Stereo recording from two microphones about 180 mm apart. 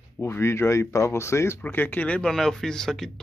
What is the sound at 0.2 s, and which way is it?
Speech, 10° left (ahead or behind).